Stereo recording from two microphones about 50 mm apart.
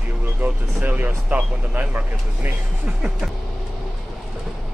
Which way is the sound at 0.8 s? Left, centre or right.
Right.